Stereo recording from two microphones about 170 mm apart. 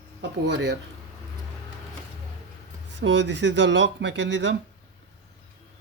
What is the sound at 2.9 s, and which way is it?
Speech, 90° right.